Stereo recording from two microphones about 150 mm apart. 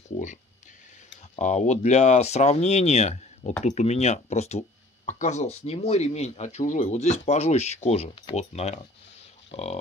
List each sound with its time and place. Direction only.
1.4 s speech: 50° left (ahead or behind)